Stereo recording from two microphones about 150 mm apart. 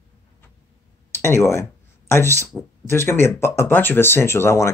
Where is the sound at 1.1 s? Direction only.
15° left (ahead or behind).